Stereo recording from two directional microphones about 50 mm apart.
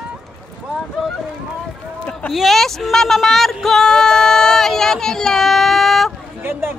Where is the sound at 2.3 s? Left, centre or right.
Centre.